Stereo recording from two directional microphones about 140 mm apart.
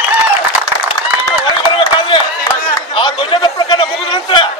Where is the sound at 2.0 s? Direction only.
40° left (ahead or behind).